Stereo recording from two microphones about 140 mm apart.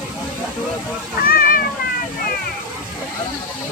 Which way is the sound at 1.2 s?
90° left.